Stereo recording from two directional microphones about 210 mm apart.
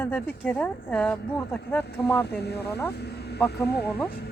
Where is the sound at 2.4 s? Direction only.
50° left (ahead or behind).